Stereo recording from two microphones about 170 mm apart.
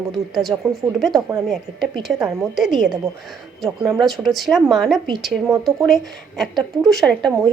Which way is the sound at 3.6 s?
Centre (ahead or behind).